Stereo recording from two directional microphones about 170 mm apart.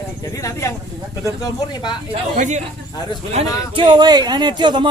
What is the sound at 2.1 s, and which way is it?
A man's voice, 45° right (ahead or behind).